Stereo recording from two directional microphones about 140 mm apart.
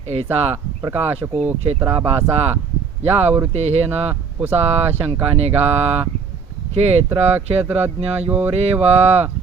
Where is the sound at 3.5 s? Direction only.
50° right (ahead or behind).